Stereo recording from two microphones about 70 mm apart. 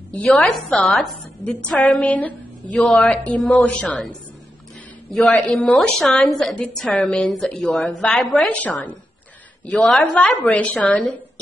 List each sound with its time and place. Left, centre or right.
0.3 s a woman's voice: centre
1.4 s a woman's voice: centre
2.7 s a woman's voice: centre
3.0 s a woman's voice: centre
5.2 s a woman's voice: centre
5.7 s a woman's voice: centre
6.6 s a woman's voice: centre
8.5 s a woman's voice: left